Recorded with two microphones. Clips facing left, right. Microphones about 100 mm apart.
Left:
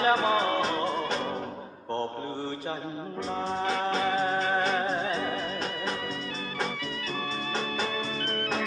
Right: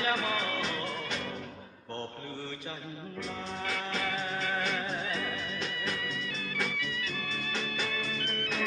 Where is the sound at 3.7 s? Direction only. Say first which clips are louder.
Left 7 dB; 30° left (ahead or behind).